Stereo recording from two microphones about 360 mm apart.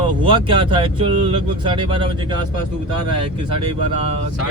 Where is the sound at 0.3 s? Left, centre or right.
Centre.